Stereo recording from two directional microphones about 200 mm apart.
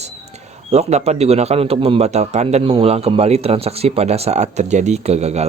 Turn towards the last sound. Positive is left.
turn(degrees=-35)  # may be behind; listen again after turning